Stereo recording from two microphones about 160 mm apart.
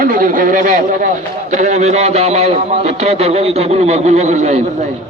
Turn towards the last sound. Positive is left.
turn(degrees=-45)  # may be behind; listen again after turning